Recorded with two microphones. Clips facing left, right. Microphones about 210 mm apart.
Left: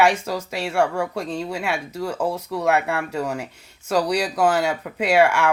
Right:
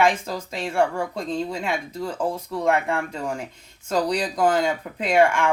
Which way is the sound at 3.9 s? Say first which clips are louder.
Left 2 dB; 10° left (ahead or behind).